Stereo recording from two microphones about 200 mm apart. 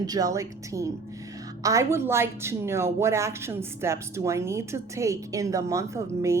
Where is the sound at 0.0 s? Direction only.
20° right (ahead or behind).